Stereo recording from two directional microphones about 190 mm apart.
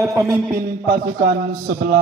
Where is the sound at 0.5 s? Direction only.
50° right (ahead or behind).